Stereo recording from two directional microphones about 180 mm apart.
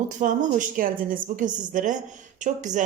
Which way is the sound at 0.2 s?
45° right (ahead or behind).